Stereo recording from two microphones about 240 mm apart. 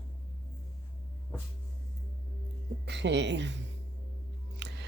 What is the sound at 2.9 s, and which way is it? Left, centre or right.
Speech, right.